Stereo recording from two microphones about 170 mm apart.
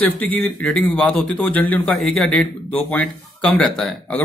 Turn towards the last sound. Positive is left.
turn(degrees=5)  # may be behind; listen again after turning